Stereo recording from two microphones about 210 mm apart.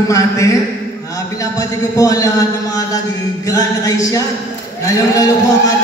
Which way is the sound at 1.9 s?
15° left (ahead or behind).